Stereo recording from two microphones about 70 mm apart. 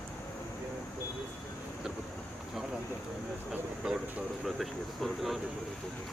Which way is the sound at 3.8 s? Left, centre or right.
Centre.